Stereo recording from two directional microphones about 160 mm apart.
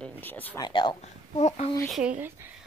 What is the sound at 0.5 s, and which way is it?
Speech, 25° left (ahead or behind).